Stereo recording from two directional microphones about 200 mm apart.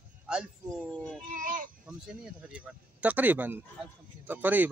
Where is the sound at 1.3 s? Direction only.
40° right (ahead or behind).